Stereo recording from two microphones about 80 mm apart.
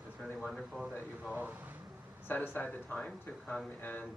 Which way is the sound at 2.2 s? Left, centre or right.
Left.